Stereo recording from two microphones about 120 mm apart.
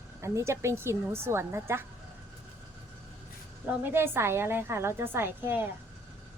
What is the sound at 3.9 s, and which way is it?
A woman's voice, 20° right (ahead or behind).